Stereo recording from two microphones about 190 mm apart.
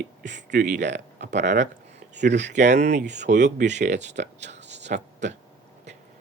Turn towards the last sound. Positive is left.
turn(degrees=-40)  # may be behind; listen again after turning